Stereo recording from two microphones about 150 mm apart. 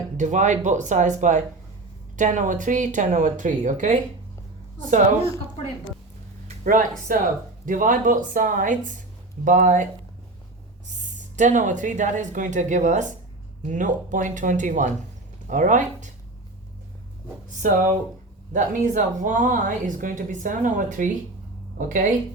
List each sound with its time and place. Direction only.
0.2 s a woman's voice: 55° right (ahead or behind)
6.7 s a woman's voice: 65° right (ahead or behind)
10.8 s a woman's voice: 55° right (ahead or behind)
17.6 s a woman's voice: 60° right (ahead or behind)